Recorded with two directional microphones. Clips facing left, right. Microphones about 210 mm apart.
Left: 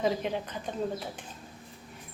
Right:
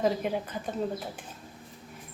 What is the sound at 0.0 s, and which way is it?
Speech, 5° right (ahead or behind).